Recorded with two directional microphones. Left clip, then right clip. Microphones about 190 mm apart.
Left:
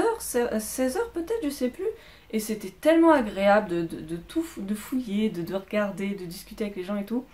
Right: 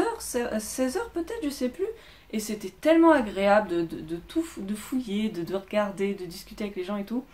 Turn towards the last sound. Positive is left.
turn(degrees=0)  # may be behind; listen again after turning